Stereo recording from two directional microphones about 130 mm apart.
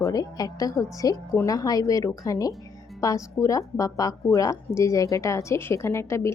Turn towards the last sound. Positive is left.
turn(degrees=20)  # may be behind; listen again after turning